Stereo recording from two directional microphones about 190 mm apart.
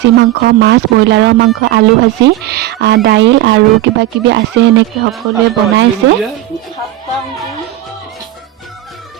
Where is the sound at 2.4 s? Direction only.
60° right (ahead or behind).